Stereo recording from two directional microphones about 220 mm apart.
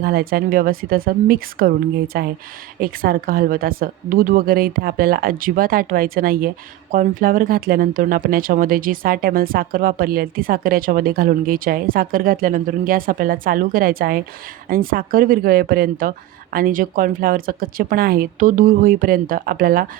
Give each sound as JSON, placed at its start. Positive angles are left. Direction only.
{"t": 0.0, "sound": "speech", "side_deg": -45}